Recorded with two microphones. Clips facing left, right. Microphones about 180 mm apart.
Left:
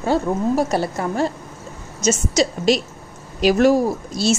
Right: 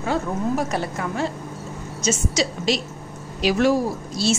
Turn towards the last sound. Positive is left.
turn(degrees=45)  # may be behind; listen again after turning